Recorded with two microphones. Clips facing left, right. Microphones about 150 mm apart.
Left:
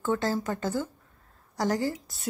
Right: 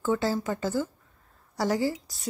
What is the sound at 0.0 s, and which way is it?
A woman's voice, 5° right (ahead or behind).